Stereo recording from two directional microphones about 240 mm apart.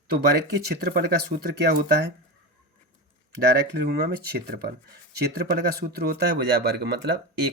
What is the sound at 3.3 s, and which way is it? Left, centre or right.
Speech, right.